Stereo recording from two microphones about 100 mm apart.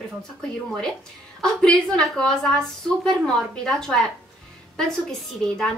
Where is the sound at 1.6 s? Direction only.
5° left (ahead or behind).